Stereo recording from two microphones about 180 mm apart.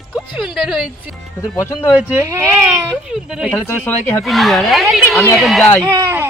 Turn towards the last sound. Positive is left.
turn(degrees=-20)  # may be behind; listen again after turning